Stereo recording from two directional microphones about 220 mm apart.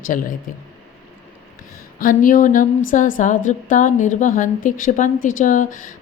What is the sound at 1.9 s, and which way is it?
A woman's voice, 40° left (ahead or behind).